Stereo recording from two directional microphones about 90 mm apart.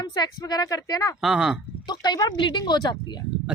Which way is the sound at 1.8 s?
55° left (ahead or behind).